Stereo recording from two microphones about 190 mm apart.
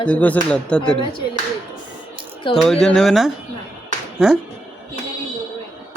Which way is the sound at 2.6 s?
Centre (ahead or behind).